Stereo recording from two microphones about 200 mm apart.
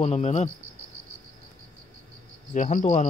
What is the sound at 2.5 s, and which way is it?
Speech, 40° left (ahead or behind).